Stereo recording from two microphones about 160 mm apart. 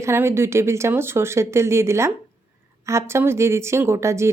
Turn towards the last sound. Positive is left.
turn(degrees=-15)  # may be behind; listen again after turning